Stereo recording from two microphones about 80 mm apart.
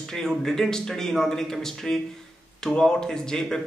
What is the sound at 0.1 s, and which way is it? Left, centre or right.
A man's voice, centre.